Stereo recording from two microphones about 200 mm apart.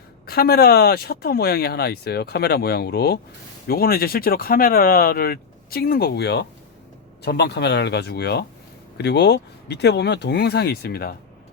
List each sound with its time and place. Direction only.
0.3 s speech: 50° left (ahead or behind)